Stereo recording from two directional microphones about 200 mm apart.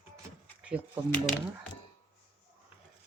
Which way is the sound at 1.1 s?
40° left (ahead or behind).